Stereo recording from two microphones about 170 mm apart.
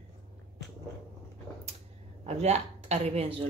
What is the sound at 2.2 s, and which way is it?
Speech, 40° right (ahead or behind).